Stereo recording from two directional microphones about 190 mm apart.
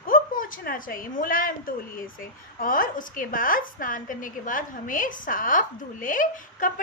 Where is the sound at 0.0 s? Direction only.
45° left (ahead or behind).